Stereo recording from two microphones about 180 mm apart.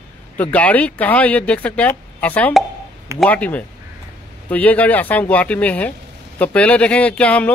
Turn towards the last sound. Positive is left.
turn(degrees=5)  # may be behind; listen again after turning